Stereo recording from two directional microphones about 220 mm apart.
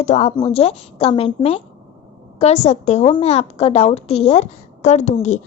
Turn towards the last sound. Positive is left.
turn(degrees=35)  # may be behind; listen again after turning